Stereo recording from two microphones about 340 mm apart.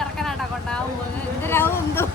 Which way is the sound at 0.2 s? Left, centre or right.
Centre.